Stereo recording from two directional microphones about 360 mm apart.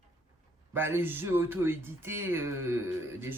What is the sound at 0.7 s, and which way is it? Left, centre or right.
Speech, centre.